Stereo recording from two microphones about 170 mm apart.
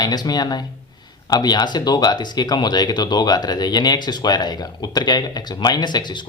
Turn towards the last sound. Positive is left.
turn(degrees=25)  # may be behind; listen again after turning